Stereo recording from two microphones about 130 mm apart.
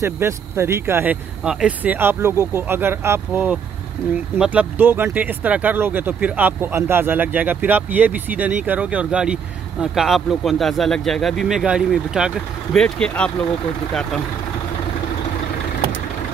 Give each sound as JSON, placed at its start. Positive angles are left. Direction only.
{"t": 0.0, "sound": "speech", "side_deg": -20}
{"t": 1.4, "sound": "speech", "side_deg": -5}
{"t": 12.7, "sound": "speech", "side_deg": 5}